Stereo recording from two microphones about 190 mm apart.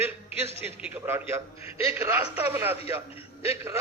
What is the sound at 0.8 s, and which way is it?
A man's voice, 10° right (ahead or behind).